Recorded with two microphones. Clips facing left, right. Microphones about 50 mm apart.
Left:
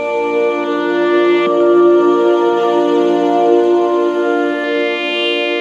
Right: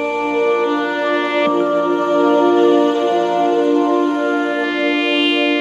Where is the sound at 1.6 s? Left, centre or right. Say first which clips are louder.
Left 7 dB; left.